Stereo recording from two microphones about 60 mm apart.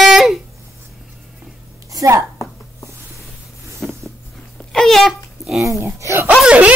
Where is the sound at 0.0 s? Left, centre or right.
Centre.